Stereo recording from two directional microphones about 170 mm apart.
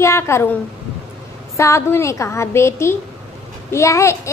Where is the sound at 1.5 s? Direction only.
15° left (ahead or behind).